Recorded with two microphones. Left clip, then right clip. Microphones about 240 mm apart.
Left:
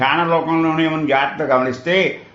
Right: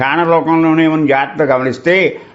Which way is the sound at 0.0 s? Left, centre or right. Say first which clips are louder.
Right 4 dB; right.